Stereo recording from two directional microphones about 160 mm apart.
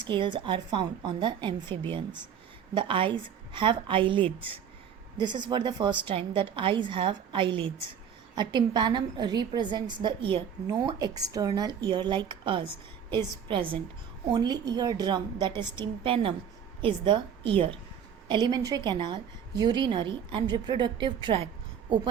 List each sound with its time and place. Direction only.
0.0 s a woman's voice: 30° right (ahead or behind)